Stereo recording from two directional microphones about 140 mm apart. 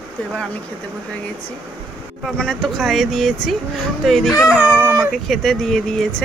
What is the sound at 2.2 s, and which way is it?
Speech, 5° left (ahead or behind).